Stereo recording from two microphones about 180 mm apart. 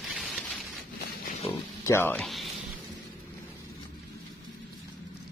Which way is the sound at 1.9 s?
10° left (ahead or behind).